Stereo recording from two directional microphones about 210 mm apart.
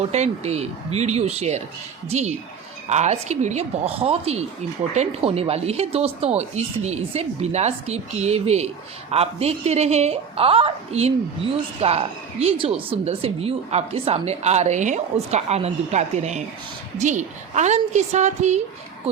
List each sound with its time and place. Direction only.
0.0 s speech: 30° right (ahead or behind)